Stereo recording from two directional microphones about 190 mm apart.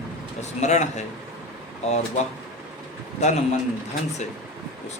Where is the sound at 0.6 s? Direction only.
35° left (ahead or behind).